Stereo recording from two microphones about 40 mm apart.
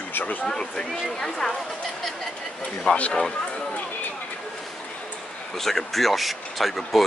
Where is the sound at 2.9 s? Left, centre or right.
Left.